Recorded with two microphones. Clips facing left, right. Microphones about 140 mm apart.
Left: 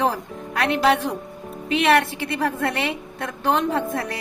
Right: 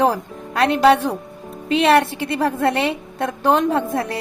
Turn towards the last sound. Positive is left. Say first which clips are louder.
# right 4 dB
turn(degrees=-30)  # may be behind; listen again after turning